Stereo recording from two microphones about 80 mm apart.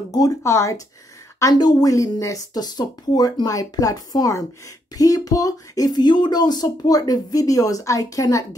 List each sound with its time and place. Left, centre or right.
0.4 s speech: left
1.5 s speech: left